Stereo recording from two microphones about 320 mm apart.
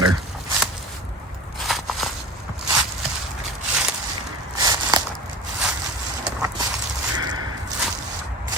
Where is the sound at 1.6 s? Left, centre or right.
Centre.